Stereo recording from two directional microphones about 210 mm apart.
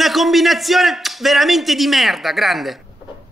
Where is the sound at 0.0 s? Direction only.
Centre (ahead or behind).